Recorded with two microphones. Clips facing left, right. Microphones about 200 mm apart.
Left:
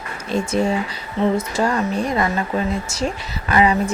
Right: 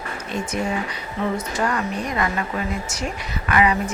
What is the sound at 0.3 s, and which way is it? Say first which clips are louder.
Speech: left 6 dB; 25° left (ahead or behind).